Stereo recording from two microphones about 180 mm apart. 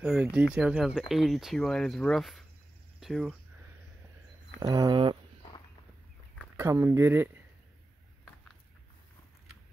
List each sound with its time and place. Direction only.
0.0 s speech: 5° right (ahead or behind)
4.6 s a sound: 20° right (ahead or behind)
6.5 s speech: 15° right (ahead or behind)